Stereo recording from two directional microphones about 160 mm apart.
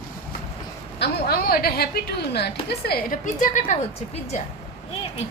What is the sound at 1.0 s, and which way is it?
A woman's voice, 75° left (ahead or behind).